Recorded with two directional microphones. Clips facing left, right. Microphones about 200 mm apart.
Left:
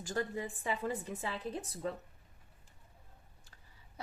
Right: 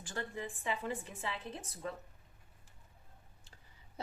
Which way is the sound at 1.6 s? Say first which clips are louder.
Left 5 dB; 35° left (ahead or behind).